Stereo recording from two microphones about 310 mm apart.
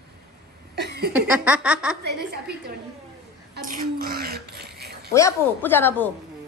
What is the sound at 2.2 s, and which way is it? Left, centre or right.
Speech, right.